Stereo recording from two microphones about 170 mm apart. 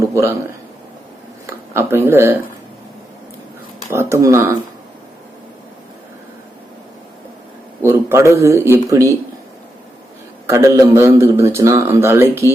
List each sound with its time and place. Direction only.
0.0 s a sound: 15° right (ahead or behind)
1.5 s speech: 15° right (ahead or behind)
3.8 s a man's voice: 15° right (ahead or behind)
7.8 s a man's voice: 15° right (ahead or behind)
10.5 s a man's voice: 15° right (ahead or behind)